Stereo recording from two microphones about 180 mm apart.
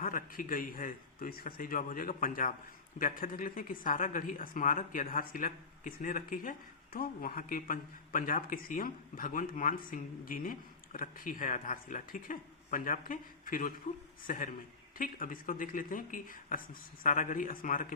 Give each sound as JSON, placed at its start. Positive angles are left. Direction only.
{"t": 0.0, "sound": "a woman's voice", "side_deg": 50}